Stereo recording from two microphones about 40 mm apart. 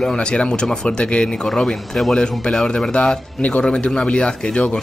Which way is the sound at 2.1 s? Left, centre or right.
Centre.